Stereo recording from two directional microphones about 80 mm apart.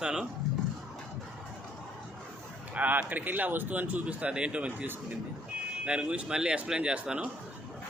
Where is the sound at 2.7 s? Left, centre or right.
Centre.